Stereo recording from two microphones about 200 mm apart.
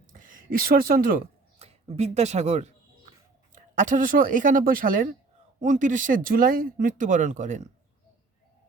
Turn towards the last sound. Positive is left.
turn(degrees=-35)  # may be behind; listen again after turning